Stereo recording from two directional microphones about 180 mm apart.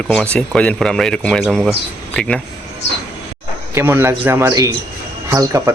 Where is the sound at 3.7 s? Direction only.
10° right (ahead or behind).